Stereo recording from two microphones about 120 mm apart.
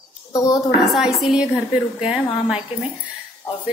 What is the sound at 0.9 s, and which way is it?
A woman's voice, 5° right (ahead or behind).